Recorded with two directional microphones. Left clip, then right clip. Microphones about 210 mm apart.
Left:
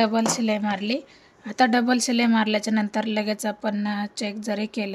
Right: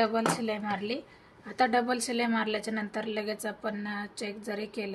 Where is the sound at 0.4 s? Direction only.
55° left (ahead or behind).